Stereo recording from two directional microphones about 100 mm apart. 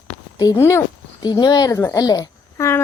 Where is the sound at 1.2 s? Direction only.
45° left (ahead or behind).